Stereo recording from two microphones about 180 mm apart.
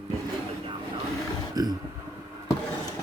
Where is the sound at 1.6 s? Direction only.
20° right (ahead or behind).